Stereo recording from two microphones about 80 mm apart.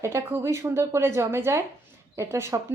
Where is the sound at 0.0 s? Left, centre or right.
Right.